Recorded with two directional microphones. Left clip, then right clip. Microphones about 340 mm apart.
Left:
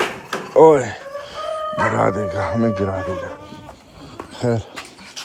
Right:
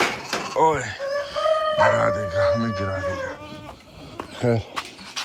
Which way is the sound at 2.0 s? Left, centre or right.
Centre.